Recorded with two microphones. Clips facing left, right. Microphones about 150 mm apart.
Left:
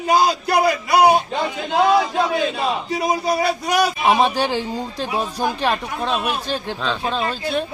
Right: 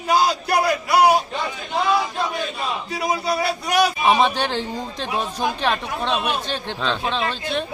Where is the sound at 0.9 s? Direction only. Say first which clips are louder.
Left 1 dB; 20° left (ahead or behind).